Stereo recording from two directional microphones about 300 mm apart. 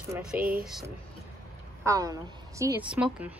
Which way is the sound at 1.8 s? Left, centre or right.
Centre.